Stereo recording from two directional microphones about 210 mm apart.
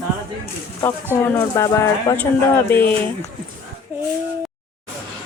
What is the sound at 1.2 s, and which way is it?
Speech, 15° left (ahead or behind).